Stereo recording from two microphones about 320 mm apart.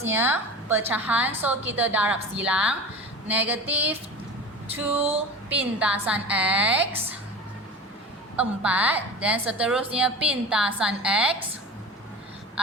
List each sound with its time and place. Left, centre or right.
0.0 s a woman's voice: centre
5.5 s a woman's voice: centre
8.4 s a woman's voice: centre